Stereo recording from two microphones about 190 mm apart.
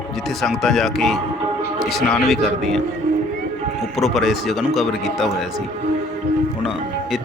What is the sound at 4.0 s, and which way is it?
Speech, centre (ahead or behind).